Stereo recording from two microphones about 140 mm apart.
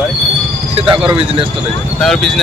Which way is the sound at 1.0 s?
40° right (ahead or behind).